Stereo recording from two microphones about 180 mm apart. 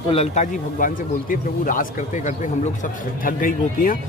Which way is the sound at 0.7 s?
50° left (ahead or behind).